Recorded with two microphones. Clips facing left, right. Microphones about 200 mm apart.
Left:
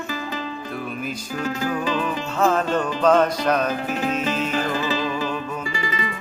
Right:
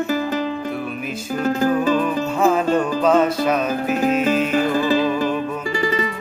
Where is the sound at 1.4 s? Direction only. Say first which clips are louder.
Right 7 dB; 45° right (ahead or behind).